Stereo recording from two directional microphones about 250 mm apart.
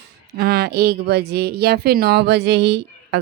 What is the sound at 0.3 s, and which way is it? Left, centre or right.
Speech, right.